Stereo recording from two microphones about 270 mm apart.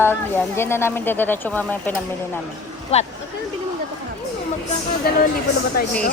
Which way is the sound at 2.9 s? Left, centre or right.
Left.